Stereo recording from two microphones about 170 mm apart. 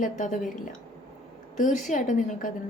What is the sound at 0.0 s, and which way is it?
Speech, 45° left (ahead or behind).